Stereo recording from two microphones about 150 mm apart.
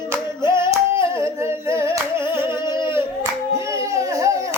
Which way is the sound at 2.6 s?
30° left (ahead or behind).